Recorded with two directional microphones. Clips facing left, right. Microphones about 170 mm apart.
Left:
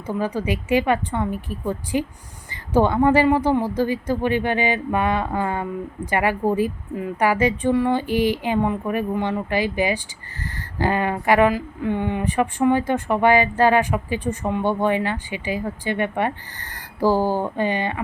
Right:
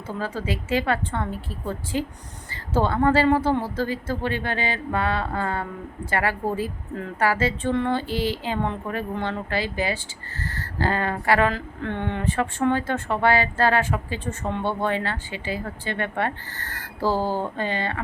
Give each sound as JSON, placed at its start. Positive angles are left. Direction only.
{"t": 0.1, "sound": "speech", "side_deg": 15}